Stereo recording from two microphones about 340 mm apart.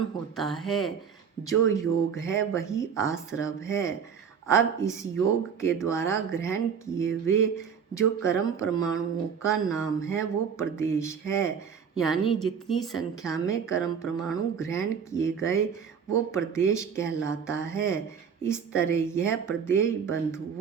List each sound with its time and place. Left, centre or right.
0.3 s a woman's voice: centre